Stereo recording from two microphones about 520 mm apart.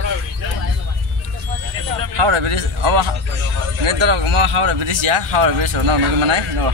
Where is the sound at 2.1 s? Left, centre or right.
Right.